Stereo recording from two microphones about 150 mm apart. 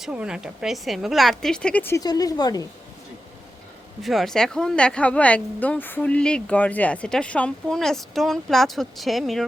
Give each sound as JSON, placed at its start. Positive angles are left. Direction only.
{"t": 0.0, "sound": "speech", "side_deg": -5}
{"t": 2.0, "sound": "speech", "side_deg": 25}
{"t": 4.0, "sound": "speech", "side_deg": 0}